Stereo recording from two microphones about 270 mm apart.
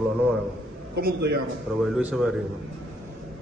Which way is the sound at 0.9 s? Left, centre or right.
Right.